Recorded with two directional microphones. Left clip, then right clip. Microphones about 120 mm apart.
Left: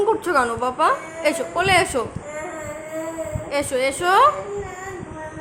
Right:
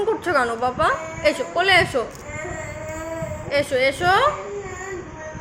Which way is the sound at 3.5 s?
15° left (ahead or behind).